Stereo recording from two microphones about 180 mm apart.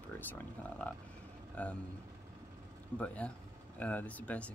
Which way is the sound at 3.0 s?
5° left (ahead or behind).